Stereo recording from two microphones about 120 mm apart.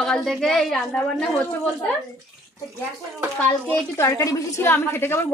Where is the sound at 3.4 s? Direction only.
20° left (ahead or behind).